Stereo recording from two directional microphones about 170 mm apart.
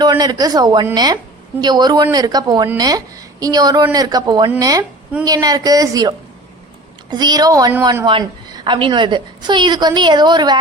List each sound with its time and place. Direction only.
0.0 s a woman's voice: 25° right (ahead or behind)